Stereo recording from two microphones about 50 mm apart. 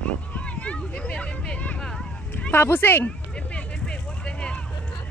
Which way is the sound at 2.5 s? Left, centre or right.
Left.